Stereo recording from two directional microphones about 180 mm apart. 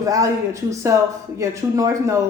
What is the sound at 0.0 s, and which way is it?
Speech, 20° right (ahead or behind).